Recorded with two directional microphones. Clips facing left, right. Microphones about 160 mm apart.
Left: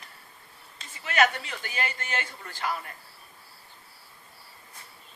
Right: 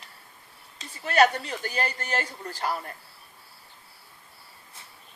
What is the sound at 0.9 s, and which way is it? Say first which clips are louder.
Speech: right 4 dB; 35° right (ahead or behind).